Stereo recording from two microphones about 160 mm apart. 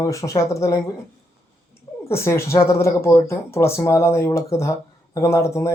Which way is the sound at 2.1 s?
15° left (ahead or behind).